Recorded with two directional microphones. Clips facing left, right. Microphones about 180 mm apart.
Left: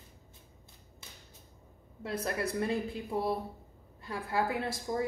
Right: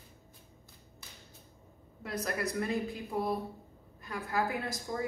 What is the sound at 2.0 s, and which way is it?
Speech, 30° left (ahead or behind).